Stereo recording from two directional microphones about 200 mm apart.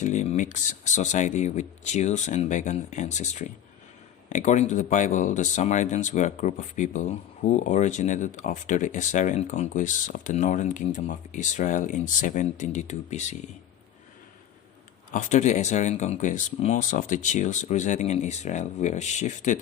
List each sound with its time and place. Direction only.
0.0 s speech: 35° left (ahead or behind)
15.1 s speech: 35° left (ahead or behind)